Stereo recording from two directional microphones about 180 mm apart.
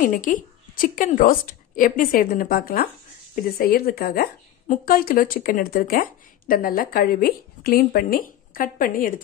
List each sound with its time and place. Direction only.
0.0 s a woman's voice: 45° left (ahead or behind)